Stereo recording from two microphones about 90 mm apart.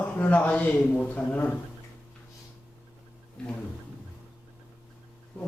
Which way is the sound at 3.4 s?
10° left (ahead or behind).